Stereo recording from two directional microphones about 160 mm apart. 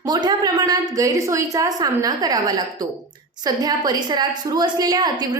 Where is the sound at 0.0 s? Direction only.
25° right (ahead or behind).